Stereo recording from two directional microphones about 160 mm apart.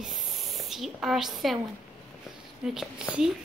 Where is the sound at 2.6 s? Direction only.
5° right (ahead or behind).